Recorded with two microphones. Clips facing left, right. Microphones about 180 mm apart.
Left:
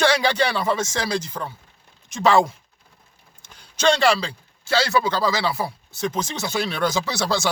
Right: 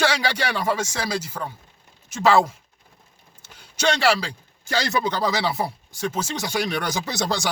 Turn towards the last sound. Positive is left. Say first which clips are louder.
# left 2 dB
turn(degrees=-15)  # may be behind; listen again after turning